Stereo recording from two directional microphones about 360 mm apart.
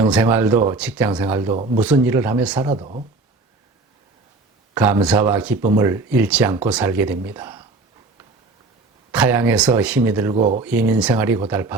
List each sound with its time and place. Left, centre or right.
0.1 s speech: centre
2.6 s speech: centre
4.7 s speech: centre
9.1 s speech: centre
10.3 s speech: right
10.6 s speech: centre